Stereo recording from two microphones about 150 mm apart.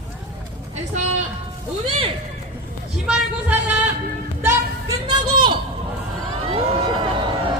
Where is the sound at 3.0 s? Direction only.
10° right (ahead or behind).